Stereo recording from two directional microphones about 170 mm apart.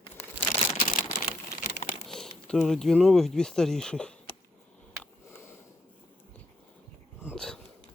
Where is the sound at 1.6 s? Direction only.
45° left (ahead or behind).